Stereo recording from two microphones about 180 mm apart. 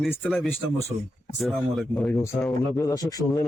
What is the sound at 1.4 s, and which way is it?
A man's voice, centre (ahead or behind).